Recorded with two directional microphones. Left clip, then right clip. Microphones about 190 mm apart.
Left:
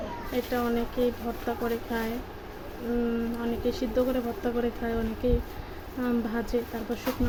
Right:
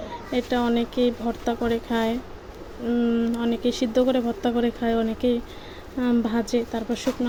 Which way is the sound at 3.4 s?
40° right (ahead or behind).